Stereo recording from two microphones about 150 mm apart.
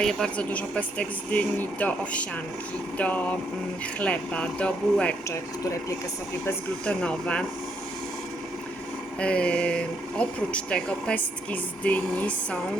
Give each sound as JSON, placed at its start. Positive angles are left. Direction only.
{"t": 0.0, "sound": "speech", "side_deg": 5}
{"t": 5.3, "sound": "speech", "side_deg": 20}
{"t": 6.4, "sound": "speech", "side_deg": 5}
{"t": 9.2, "sound": "speech", "side_deg": 5}